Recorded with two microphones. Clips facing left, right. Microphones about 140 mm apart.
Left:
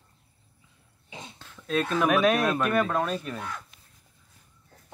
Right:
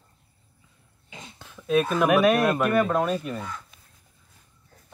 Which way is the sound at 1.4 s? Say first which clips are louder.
Right 5 dB; 15° right (ahead or behind).